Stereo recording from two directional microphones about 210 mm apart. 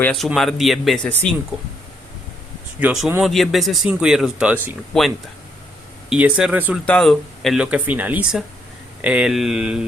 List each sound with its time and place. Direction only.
0.0 s speech: 5° left (ahead or behind)
2.8 s speech: 5° right (ahead or behind)
6.8 s speech: 5° left (ahead or behind)